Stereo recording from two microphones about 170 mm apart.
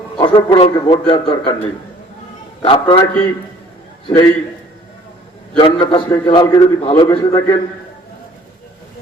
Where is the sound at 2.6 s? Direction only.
35° left (ahead or behind).